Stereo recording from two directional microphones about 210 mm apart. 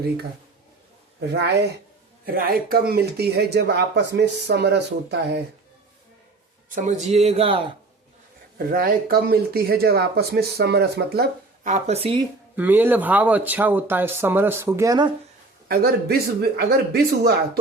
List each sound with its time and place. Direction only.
2.2 s speech: 45° right (ahead or behind)
6.7 s speech: 35° right (ahead or behind)
8.5 s speech: 45° right (ahead or behind)
11.7 s speech: 30° right (ahead or behind)
12.5 s speech: 10° right (ahead or behind)
15.7 s speech: 45° right (ahead or behind)